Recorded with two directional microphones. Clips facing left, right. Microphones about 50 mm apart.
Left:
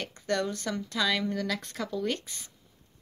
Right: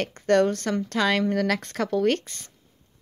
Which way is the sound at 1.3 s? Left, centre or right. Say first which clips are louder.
Right 7 dB; right.